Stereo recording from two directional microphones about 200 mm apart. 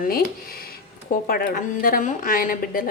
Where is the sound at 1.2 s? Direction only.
50° left (ahead or behind).